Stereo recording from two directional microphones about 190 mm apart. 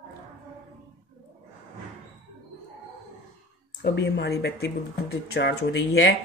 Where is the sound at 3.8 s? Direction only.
60° left (ahead or behind).